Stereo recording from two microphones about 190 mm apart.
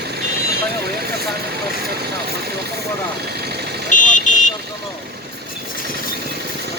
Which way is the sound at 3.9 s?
40° left (ahead or behind).